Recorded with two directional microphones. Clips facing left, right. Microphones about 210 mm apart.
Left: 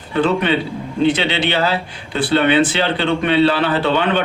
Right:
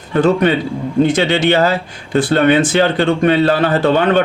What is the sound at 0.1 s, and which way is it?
Speech, 45° right (ahead or behind).